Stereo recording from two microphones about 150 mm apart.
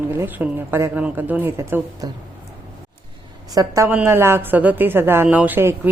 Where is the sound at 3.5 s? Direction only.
20° right (ahead or behind).